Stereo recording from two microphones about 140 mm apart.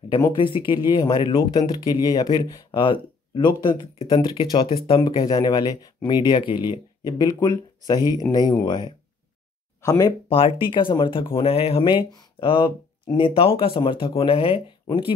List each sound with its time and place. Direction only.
0.2 s speech: 35° left (ahead or behind)
10.3 s speech: 40° left (ahead or behind)